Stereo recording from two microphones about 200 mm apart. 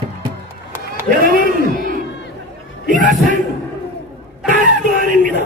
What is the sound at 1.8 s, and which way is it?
Crowd, 45° right (ahead or behind).